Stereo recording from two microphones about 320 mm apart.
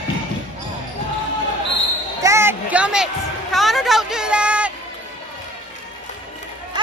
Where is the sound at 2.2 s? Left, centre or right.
Centre.